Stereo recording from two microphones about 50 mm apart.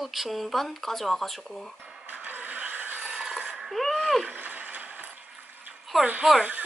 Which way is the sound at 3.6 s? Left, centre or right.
Centre.